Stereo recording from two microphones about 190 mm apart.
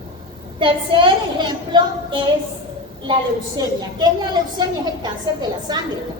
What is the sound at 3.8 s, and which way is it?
A woman's voice, 20° right (ahead or behind).